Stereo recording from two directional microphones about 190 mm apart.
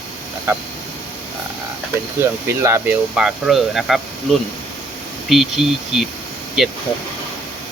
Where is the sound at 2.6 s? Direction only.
15° right (ahead or behind).